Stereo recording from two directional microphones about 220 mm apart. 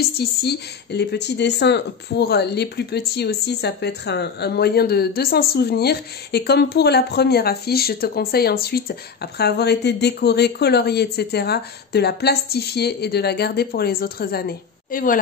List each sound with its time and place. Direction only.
0.2 s speech: 45° left (ahead or behind)